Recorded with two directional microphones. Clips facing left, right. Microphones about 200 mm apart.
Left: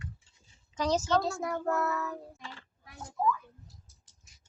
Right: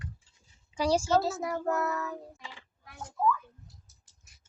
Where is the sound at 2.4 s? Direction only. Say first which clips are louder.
Left 1 dB; 15° right (ahead or behind).